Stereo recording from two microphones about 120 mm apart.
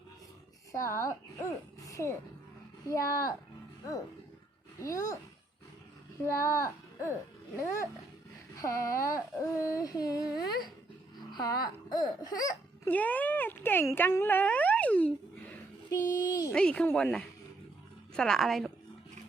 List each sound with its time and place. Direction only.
0.7 s speech: 25° left (ahead or behind)
4.8 s speech: 25° left (ahead or behind)
6.2 s speech: 25° left (ahead or behind)
8.6 s speech: 25° left (ahead or behind)
12.9 s speech: 15° left (ahead or behind)
15.9 s a child's voice: 30° left (ahead or behind)
16.5 s a woman's voice: 10° left (ahead or behind)